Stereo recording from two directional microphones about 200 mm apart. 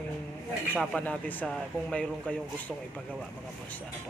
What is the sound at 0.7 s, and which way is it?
Speech, 5° left (ahead or behind).